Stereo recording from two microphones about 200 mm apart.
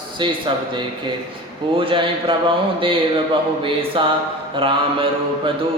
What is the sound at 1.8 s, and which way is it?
Mantra, 25° right (ahead or behind).